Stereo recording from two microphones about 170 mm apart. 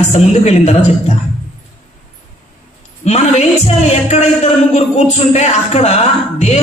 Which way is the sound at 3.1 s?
40° left (ahead or behind).